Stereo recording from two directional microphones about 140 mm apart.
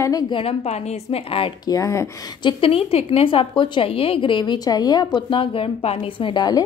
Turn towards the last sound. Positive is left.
turn(degrees=30)  # may be behind; listen again after turning